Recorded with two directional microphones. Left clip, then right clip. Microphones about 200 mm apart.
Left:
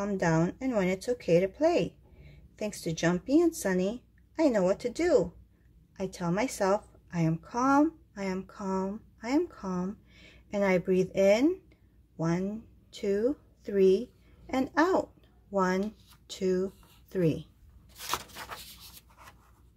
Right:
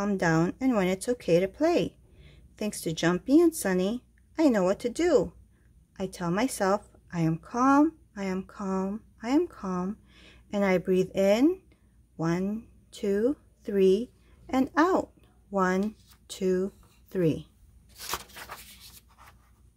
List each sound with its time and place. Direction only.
0.0 s a woman's voice: 25° right (ahead or behind)
18.7 s scratch: 20° right (ahead or behind)